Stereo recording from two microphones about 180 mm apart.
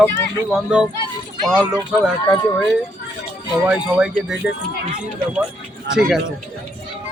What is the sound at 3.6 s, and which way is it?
Speech, 5° right (ahead or behind).